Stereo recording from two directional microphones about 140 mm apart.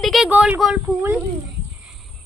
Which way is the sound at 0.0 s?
Centre (ahead or behind).